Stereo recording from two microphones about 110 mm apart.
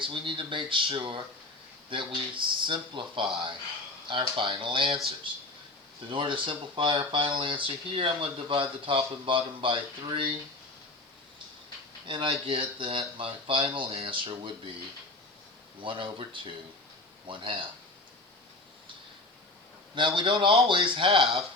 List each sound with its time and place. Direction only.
0.0 s speech: 50° right (ahead or behind)
6.1 s speech: 50° right (ahead or behind)
12.0 s speech: 50° right (ahead or behind)
15.8 s speech: 50° right (ahead or behind)
20.0 s speech: 50° right (ahead or behind)
21.2 s speech: centre (ahead or behind)